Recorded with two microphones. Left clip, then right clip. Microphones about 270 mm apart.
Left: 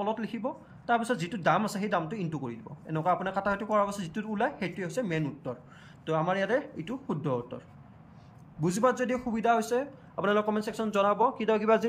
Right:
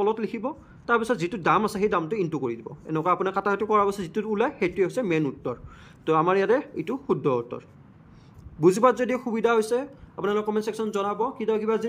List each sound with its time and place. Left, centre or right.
0.0 s speech: centre